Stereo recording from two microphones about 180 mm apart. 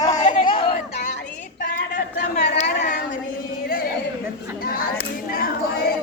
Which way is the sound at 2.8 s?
45° left (ahead or behind).